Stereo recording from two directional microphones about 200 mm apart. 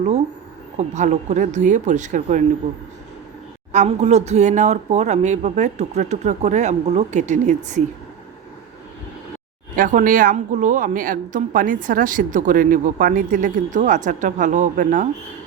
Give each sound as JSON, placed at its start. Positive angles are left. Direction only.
{"t": 0.8, "sound": "a woman's voice", "side_deg": -35}
{"t": 3.7, "sound": "a woman's voice", "side_deg": -35}
{"t": 9.7, "sound": "a woman's voice", "side_deg": -45}